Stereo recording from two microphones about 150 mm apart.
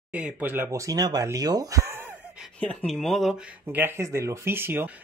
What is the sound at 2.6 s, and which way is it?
Speech, 5° left (ahead or behind).